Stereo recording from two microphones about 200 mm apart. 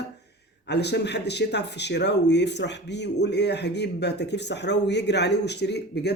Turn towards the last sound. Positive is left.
turn(degrees=55)  # may be behind; listen again after turning